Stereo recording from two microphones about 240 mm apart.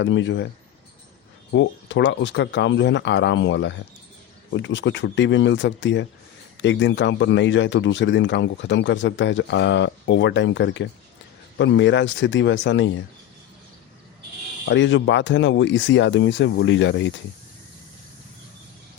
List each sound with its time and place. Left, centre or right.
0.0 s speech: left
1.5 s speech: left
14.7 s speech: left